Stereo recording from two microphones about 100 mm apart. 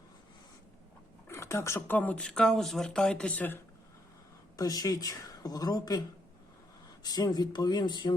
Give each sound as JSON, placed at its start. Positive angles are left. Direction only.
{"t": 1.3, "sound": "speech", "side_deg": 30}
{"t": 2.0, "sound": "speech", "side_deg": 15}
{"t": 4.5, "sound": "speech", "side_deg": 40}
{"t": 7.0, "sound": "speech", "side_deg": 40}